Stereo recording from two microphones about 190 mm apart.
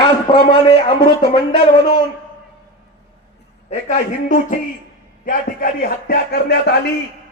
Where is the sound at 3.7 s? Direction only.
40° left (ahead or behind); by 6.8 s 60° left (ahead or behind).